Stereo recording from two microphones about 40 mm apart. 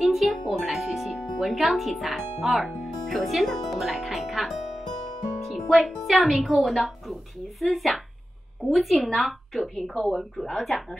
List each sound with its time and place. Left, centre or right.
0.0 s music: centre
1.5 s a woman's voice: centre
3.9 s music: centre
6.0 s a woman's voice: centre